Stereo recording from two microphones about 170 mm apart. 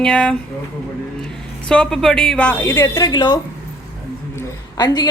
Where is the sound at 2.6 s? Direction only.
15° left (ahead or behind).